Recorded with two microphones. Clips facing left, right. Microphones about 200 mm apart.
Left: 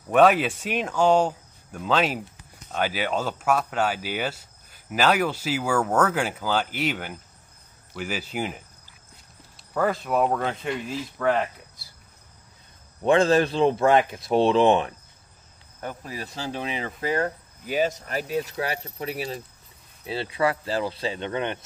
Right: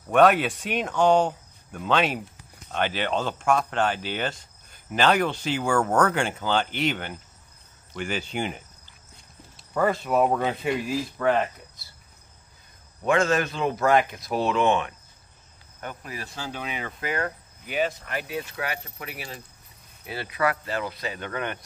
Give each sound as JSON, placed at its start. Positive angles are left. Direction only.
{"t": 0.1, "sound": "speech", "side_deg": 0}
{"t": 13.0, "sound": "speech", "side_deg": 30}